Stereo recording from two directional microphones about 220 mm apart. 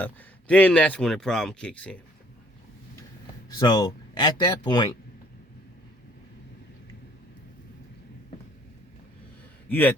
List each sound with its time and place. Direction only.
0.0 s speech: 5° left (ahead or behind)
3.6 s speech: 20° left (ahead or behind)
9.6 s a man's voice: 10° left (ahead or behind)